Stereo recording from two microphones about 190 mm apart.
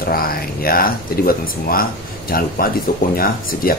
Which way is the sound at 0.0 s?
50° left (ahead or behind).